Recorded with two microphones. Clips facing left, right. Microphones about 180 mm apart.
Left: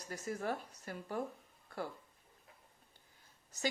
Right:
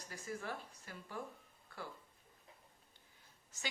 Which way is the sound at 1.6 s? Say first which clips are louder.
Left 7 dB; 45° left (ahead or behind).